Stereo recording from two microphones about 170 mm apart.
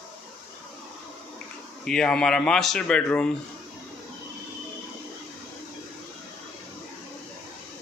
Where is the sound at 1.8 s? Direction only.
5° left (ahead or behind).